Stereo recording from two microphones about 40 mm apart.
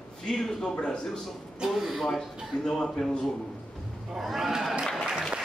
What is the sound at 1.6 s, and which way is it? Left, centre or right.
Speech, centre.